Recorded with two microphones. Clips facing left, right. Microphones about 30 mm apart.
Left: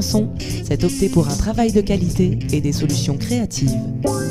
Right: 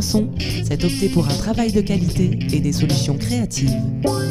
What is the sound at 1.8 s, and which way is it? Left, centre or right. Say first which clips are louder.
Speech: left 2 dB; centre.